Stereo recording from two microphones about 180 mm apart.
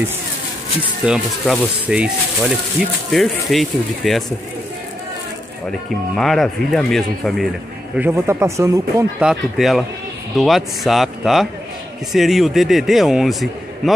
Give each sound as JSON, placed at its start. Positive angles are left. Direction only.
{"t": 1.0, "sound": "a man's voice", "side_deg": 0}
{"t": 5.7, "sound": "a man's voice", "side_deg": 5}
{"t": 7.9, "sound": "speech", "side_deg": -10}
{"t": 9.2, "sound": "a man's voice", "side_deg": 0}